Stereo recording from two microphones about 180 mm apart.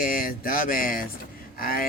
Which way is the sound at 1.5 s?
55° left (ahead or behind).